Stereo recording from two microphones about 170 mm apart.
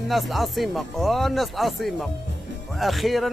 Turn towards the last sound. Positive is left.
turn(degrees=0)  # may be behind; listen again after turning